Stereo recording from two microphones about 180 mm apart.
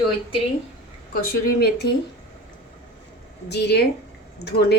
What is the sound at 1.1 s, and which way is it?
Speech, 55° left (ahead or behind).